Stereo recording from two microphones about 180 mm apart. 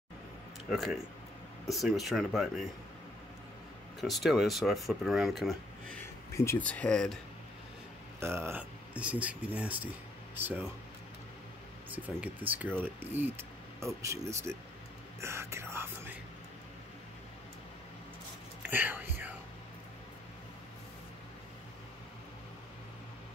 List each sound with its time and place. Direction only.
0.7 s speech: centre (ahead or behind)
4.0 s speech: centre (ahead or behind)
6.3 s speech: 15° left (ahead or behind)
8.2 s speech: 15° right (ahead or behind)
11.9 s speech: 10° right (ahead or behind)
18.6 s whispering: 10° right (ahead or behind)